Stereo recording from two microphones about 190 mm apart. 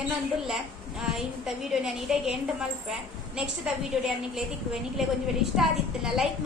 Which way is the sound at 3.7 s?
5° right (ahead or behind).